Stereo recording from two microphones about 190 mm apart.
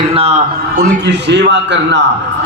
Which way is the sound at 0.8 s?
65° right (ahead or behind).